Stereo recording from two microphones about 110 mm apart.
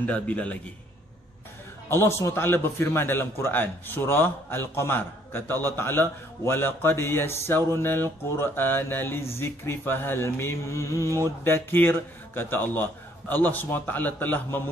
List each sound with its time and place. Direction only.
0.0 s a man's voice: 10° left (ahead or behind)
1.9 s a man's voice: 25° left (ahead or behind)